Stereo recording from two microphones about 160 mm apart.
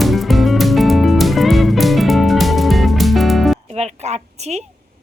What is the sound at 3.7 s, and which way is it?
Speech, 40° right (ahead or behind).